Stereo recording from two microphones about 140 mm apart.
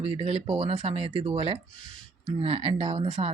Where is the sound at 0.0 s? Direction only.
45° right (ahead or behind).